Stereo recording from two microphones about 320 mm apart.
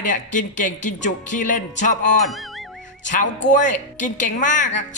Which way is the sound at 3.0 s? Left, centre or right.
Left.